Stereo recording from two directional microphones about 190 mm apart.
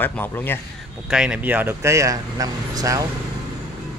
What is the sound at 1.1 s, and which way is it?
Speech, 5° right (ahead or behind).